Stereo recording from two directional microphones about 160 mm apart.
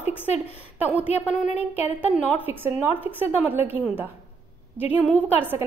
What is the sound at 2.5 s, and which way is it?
A woman's voice, 15° right (ahead or behind).